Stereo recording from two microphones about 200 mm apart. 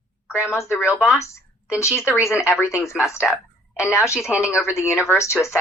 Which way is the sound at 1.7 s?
15° left (ahead or behind).